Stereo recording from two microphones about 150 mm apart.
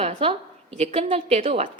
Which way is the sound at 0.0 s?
40° right (ahead or behind).